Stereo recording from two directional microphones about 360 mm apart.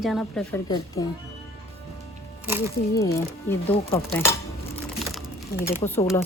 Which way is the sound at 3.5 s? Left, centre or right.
Centre.